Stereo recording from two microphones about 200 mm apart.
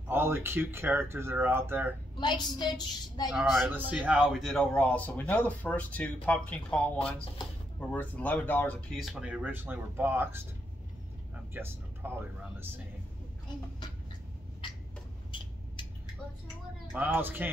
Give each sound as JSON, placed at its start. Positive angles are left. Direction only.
{"t": 0.1, "sound": "speech", "side_deg": -10}
{"t": 2.1, "sound": "a woman's voice", "side_deg": 20}
{"t": 3.3, "sound": "a man's voice", "side_deg": -5}
{"t": 7.9, "sound": "speech", "side_deg": 10}
{"t": 11.5, "sound": "speech", "side_deg": -10}
{"t": 16.9, "sound": "speech", "side_deg": -10}